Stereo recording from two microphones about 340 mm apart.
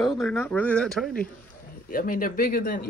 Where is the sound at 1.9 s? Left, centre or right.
Left.